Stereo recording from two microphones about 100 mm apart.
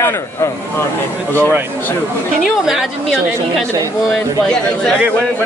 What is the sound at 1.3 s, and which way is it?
Speech, 20° left (ahead or behind).